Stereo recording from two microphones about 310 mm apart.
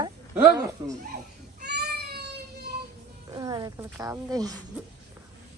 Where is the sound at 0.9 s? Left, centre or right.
Right.